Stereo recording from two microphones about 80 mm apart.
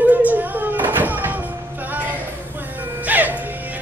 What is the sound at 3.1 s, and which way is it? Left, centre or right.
Music, right.